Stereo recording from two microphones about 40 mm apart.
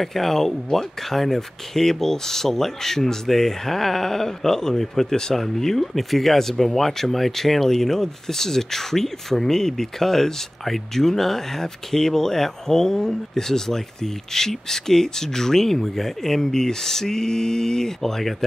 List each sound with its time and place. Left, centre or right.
0.0 s speech: centre